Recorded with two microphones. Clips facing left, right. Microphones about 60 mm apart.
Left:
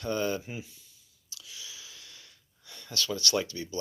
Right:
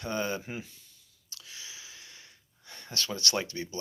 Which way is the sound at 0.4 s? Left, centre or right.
Right.